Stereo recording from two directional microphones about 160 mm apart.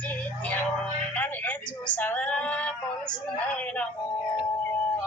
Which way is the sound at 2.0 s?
10° left (ahead or behind).